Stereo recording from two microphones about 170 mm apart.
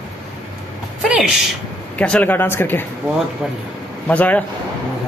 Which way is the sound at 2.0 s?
10° left (ahead or behind).